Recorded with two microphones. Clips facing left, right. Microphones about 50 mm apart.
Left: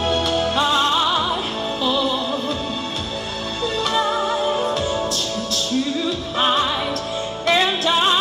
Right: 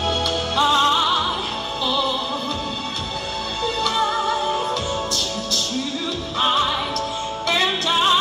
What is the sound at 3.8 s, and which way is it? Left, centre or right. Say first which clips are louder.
Music: left 1 dB; left.